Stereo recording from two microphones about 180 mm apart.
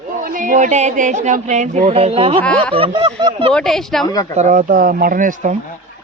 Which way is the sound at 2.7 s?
30° right (ahead or behind).